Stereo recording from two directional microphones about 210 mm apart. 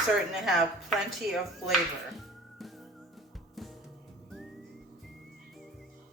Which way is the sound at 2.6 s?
Centre (ahead or behind).